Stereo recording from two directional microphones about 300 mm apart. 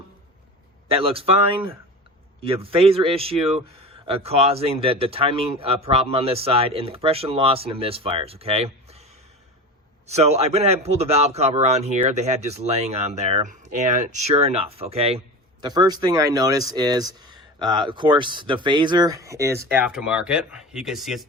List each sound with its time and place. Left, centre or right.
0.9 s speech: centre